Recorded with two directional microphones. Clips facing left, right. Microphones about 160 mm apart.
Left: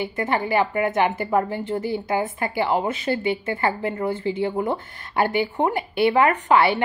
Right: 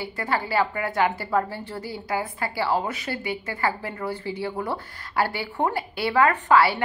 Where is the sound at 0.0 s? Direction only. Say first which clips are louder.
Left 4 dB; 20° left (ahead or behind).